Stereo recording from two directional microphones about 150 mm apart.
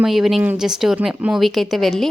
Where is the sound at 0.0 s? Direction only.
Centre (ahead or behind).